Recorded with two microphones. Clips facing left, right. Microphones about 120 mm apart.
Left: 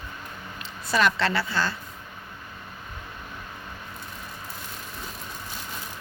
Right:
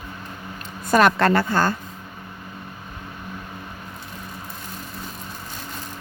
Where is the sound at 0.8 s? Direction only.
50° right (ahead or behind).